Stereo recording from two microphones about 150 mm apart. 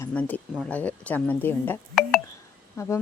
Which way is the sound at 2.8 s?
20° left (ahead or behind).